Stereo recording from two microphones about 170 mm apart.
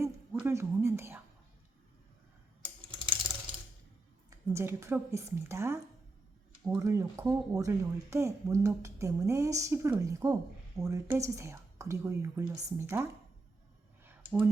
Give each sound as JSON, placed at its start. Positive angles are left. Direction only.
{"t": 0.3, "sound": "speech", "side_deg": -15}
{"t": 2.6, "sound": "typing", "side_deg": -30}
{"t": 4.3, "sound": "speech", "side_deg": -20}